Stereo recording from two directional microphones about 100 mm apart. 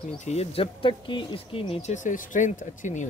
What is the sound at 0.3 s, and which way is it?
Speech, 85° left.